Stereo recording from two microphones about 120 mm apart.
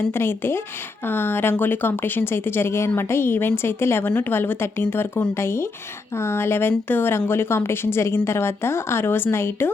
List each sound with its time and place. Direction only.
0.1 s speech: 20° left (ahead or behind)